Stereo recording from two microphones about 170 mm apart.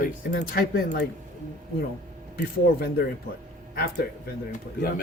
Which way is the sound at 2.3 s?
65° left (ahead or behind).